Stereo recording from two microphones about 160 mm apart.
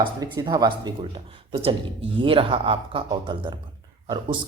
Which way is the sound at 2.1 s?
35° right (ahead or behind).